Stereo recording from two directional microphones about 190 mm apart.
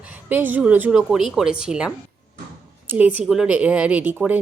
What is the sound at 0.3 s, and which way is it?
Speech, 10° right (ahead or behind).